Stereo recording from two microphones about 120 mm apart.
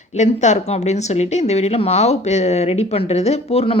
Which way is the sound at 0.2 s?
75° left (ahead or behind).